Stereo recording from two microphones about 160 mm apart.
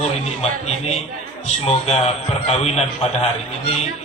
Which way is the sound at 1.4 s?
40° left (ahead or behind).